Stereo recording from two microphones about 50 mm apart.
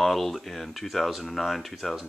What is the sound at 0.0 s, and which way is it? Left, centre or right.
Speech, centre.